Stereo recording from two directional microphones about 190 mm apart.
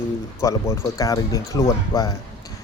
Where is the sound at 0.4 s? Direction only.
15° left (ahead or behind).